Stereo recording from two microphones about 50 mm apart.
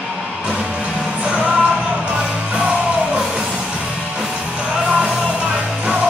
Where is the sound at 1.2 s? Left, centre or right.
Right.